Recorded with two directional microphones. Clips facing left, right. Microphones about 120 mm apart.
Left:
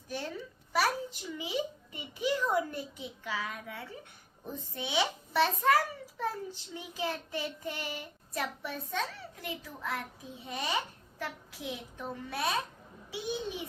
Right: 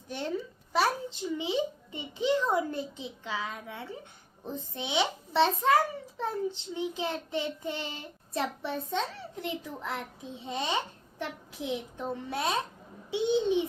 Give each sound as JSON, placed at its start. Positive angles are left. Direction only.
{"t": 0.7, "sound": "a child's voice", "side_deg": -25}